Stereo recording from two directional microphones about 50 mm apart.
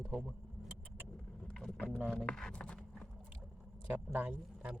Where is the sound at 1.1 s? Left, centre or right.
Centre.